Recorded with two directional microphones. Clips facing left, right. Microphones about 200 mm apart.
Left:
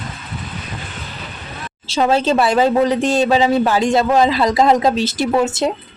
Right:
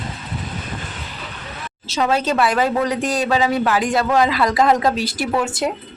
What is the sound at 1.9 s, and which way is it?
A woman's voice, 30° left (ahead or behind).